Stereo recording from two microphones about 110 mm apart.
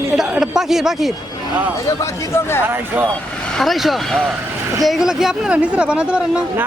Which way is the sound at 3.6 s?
Centre (ahead or behind).